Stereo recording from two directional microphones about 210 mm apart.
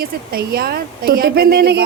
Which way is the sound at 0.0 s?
45° right (ahead or behind).